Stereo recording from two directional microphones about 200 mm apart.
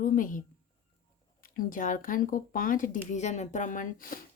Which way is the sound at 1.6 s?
45° left (ahead or behind).